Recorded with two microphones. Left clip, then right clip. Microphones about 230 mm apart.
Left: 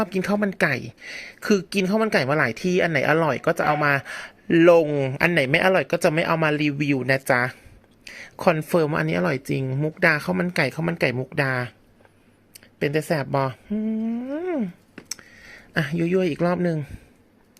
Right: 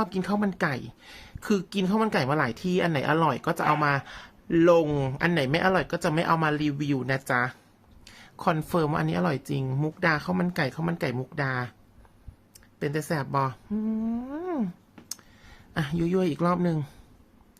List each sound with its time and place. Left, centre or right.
0.0 s speech: centre
4.9 s speech: centre
15.7 s speech: centre